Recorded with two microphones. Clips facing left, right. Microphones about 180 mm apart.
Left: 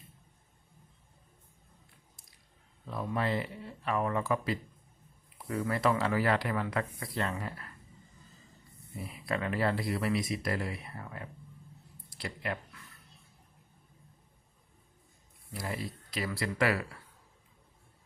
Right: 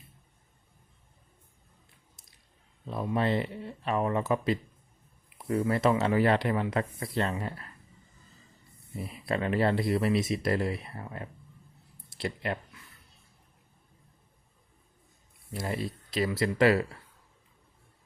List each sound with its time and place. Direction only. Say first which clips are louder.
2.8 s speech: right 4 dB; 20° right (ahead or behind)
9.2 s speech: right 4 dB; 25° right (ahead or behind)
15.5 s speech: right 4 dB; 25° right (ahead or behind)